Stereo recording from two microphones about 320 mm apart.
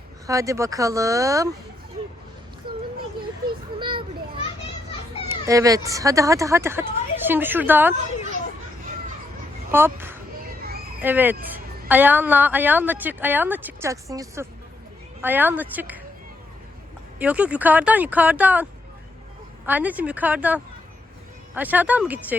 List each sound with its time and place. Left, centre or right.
0.3 s speech: centre
3.8 s children playing: centre
5.3 s a woman's voice: centre
9.7 s speech: centre
10.6 s a sound: right
11.0 s a woman's voice: centre
17.2 s a woman's voice: centre